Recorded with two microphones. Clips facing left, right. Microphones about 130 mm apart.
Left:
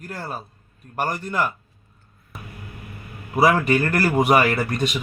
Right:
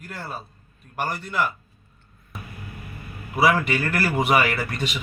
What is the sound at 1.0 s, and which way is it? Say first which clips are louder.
Speech: left 2 dB; 45° left (ahead or behind).